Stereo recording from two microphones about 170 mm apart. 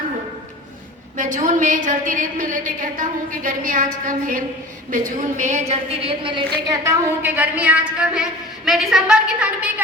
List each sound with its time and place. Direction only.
1.1 s a woman's voice: 50° right (ahead or behind); by 6.4 s 30° right (ahead or behind)
6.7 s a woman's voice: 15° right (ahead or behind)